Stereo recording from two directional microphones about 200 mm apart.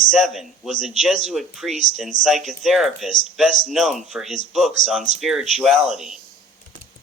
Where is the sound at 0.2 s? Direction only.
Centre (ahead or behind).